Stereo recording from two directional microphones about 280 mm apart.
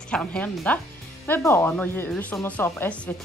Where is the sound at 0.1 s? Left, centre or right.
Centre.